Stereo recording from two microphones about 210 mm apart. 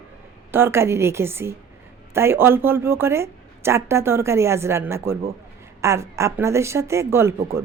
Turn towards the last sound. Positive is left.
turn(degrees=-10)  # may be behind; listen again after turning